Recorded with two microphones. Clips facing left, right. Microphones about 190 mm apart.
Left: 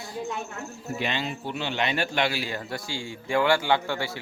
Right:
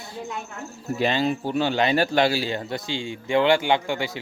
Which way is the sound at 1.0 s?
40° right (ahead or behind).